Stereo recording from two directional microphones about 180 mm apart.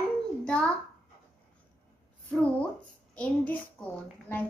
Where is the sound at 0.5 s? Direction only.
5° left (ahead or behind).